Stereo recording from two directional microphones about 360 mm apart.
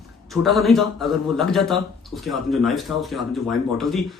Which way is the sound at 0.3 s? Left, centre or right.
Centre.